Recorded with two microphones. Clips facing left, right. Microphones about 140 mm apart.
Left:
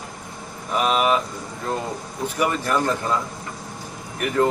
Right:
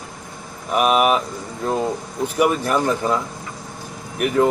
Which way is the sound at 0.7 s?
15° right (ahead or behind).